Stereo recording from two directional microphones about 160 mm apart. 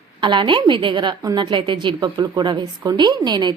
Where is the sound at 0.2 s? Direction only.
30° right (ahead or behind).